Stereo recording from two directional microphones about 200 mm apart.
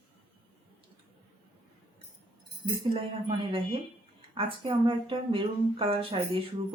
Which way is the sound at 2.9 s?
25° right (ahead or behind).